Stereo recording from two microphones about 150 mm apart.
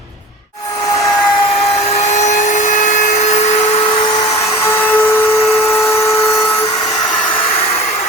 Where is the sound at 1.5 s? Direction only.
45° left (ahead or behind).